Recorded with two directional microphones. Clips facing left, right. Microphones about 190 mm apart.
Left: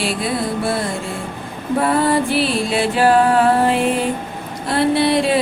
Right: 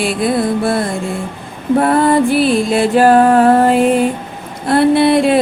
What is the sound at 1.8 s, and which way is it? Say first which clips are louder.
Music: right 4 dB; 50° right (ahead or behind).